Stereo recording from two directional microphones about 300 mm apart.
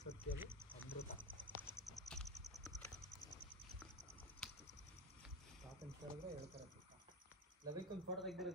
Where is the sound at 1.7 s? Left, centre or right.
Centre.